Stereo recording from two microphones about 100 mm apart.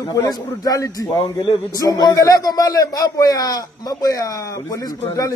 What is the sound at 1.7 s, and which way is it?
Speech, 40° left (ahead or behind).